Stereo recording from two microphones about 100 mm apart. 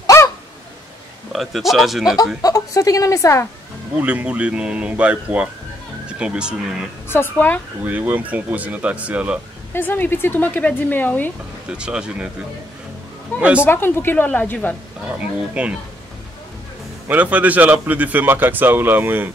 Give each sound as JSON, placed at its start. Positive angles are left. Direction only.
{"t": 0.0, "sound": "a sound", "side_deg": 30}
{"t": 1.3, "sound": "speech", "side_deg": 0}
{"t": 2.4, "sound": "a woman's voice", "side_deg": 35}
{"t": 4.0, "sound": "speech", "side_deg": -15}
{"t": 7.1, "sound": "speech", "side_deg": 25}
{"t": 7.8, "sound": "speech", "side_deg": -15}
{"t": 9.7, "sound": "speech", "side_deg": 20}
{"t": 11.7, "sound": "speech", "side_deg": -10}
{"t": 13.4, "sound": "speech", "side_deg": -10}
{"t": 13.7, "sound": "speech", "side_deg": 20}
{"t": 15.0, "sound": "speech", "side_deg": -15}
{"t": 17.1, "sound": "speech", "side_deg": -15}